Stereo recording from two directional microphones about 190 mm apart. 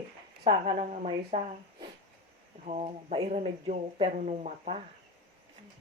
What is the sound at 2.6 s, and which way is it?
Speech, 35° right (ahead or behind).